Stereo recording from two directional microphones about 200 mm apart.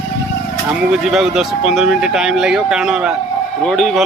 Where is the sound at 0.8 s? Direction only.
Centre (ahead or behind).